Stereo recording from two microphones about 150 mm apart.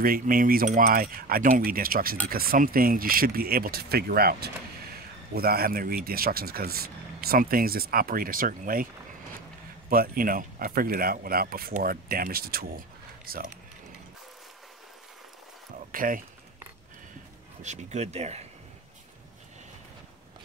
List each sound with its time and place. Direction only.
0.0 s speech: 70° right (ahead or behind)
9.8 s speech: 80° right
15.9 s speech: 65° right (ahead or behind)
17.6 s speech: 50° right (ahead or behind)